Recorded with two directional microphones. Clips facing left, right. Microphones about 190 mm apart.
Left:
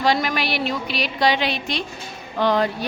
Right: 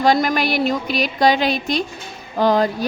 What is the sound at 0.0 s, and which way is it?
A woman's voice, 45° right (ahead or behind).